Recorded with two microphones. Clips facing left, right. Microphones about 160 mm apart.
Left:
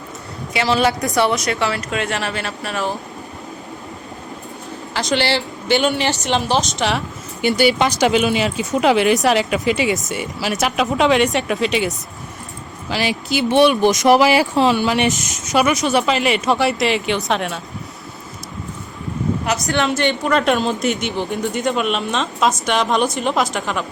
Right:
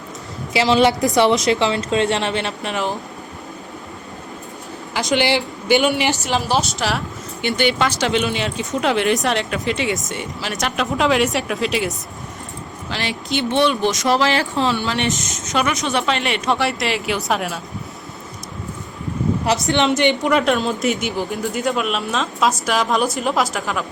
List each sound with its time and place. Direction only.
0.5 s a woman's voice: 25° right (ahead or behind)
5.1 s speech: 15° right (ahead or behind)
6.2 s speech: 5° right (ahead or behind)
7.8 s speech: 15° left (ahead or behind)
13.6 s speech: 15° left (ahead or behind)
15.5 s speech: 5° left (ahead or behind)
19.6 s a woman's voice: 20° right (ahead or behind)
20.4 s speech: centre (ahead or behind)